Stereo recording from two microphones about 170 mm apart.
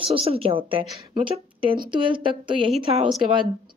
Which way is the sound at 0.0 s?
35° right (ahead or behind).